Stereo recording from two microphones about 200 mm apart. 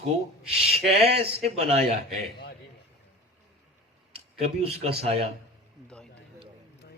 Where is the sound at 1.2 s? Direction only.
30° right (ahead or behind).